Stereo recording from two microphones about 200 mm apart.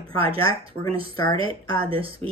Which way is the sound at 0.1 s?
25° right (ahead or behind).